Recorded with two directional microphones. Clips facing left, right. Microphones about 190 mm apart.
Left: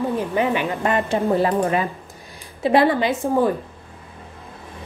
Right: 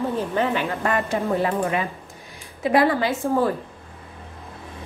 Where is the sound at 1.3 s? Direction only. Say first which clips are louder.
Left 3 dB; 35° left (ahead or behind).